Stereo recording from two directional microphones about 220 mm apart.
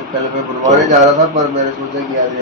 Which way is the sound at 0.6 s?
35° right (ahead or behind).